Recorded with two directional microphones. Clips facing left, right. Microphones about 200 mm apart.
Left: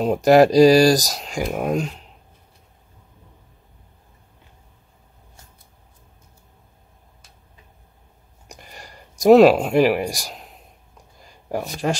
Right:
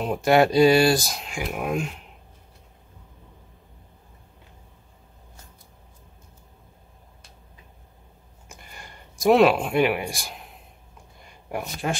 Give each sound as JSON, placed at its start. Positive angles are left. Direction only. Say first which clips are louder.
{"t": 0.0, "sound": "speech", "louder": "left 5 dB", "side_deg": 40}
{"t": 8.5, "sound": "a sound", "louder": "left 3 dB", "side_deg": 40}
{"t": 11.4, "sound": "speech", "louder": "left 5 dB", "side_deg": 35}